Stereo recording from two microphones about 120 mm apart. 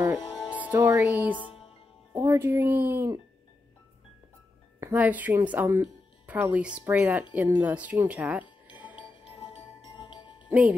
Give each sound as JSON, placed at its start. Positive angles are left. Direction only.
{"t": 0.2, "sound": "music", "side_deg": 35}
{"t": 0.5, "sound": "speech", "side_deg": -15}
{"t": 4.9, "sound": "speech", "side_deg": -15}
{"t": 8.9, "sound": "music", "side_deg": 45}
{"t": 10.5, "sound": "music", "side_deg": -10}